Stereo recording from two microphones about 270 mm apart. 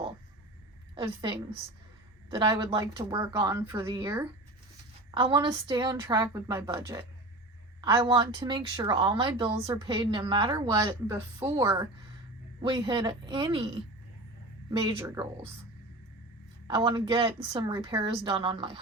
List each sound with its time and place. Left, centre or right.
0.9 s a woman's voice: centre
16.6 s speech: centre